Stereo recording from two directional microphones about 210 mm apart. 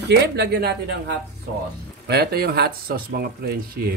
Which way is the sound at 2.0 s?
50° right (ahead or behind).